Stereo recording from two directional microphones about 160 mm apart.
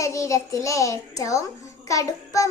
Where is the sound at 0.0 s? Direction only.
20° left (ahead or behind).